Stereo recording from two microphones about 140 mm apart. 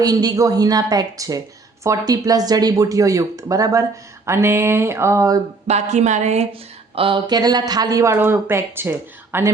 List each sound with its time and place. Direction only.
0.0 s speech: 30° right (ahead or behind)
5.6 s speech: 50° right (ahead or behind); by 9.5 s 15° right (ahead or behind)